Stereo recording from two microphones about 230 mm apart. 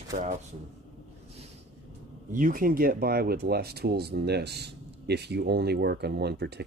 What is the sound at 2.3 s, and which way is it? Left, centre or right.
A man's voice, right.